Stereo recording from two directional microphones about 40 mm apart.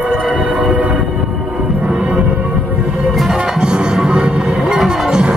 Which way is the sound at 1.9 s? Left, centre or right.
Right.